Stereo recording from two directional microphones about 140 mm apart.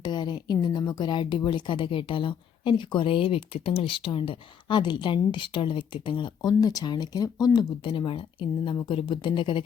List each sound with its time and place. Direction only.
0.0 s speech: 30° left (ahead or behind)